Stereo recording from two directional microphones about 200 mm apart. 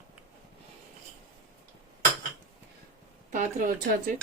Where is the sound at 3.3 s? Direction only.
40° right (ahead or behind).